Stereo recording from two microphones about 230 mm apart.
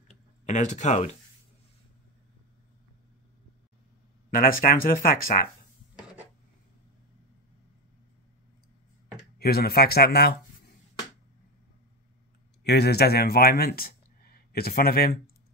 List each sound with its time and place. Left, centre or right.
0.5 s speech: left
4.3 s speech: left
9.4 s speech: left
12.6 s speech: left